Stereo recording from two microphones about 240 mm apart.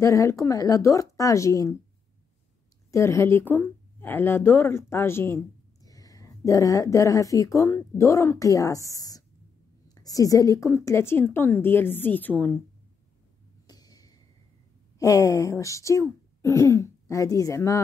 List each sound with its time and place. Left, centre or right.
0.0 s speech: centre
2.9 s speech: centre
13.7 s a sound: centre
15.0 s speech: centre